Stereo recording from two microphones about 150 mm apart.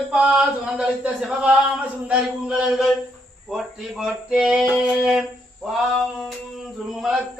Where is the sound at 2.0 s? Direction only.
5° right (ahead or behind).